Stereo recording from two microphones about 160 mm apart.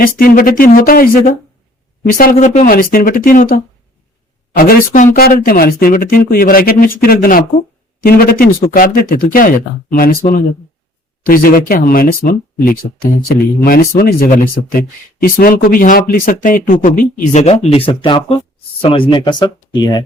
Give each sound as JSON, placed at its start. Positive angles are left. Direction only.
{"t": 0.0, "sound": "speech", "side_deg": 65}
{"t": 4.5, "sound": "speech", "side_deg": 70}
{"t": 11.3, "sound": "speech", "side_deg": 65}